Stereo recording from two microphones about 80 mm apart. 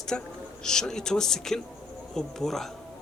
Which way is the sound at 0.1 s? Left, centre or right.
Centre.